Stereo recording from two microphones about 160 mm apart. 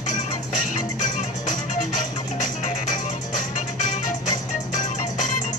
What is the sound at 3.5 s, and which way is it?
Music, 50° left (ahead or behind).